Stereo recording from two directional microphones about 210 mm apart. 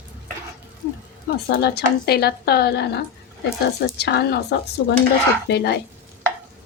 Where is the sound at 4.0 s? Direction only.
50° left (ahead or behind).